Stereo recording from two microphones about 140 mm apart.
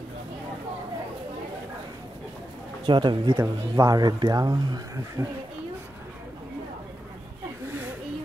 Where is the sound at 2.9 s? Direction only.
35° right (ahead or behind).